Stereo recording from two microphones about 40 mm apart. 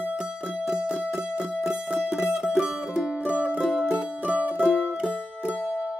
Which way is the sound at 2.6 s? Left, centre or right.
Right.